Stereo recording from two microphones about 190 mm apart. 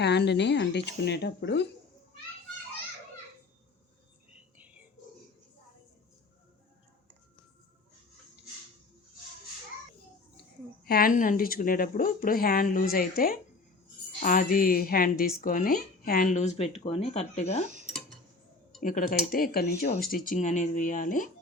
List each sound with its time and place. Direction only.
0.0 s speech: 60° left (ahead or behind)
10.8 s speech: 50° left (ahead or behind); by 17.7 s 35° left (ahead or behind)
18.8 s speech: 45° left (ahead or behind)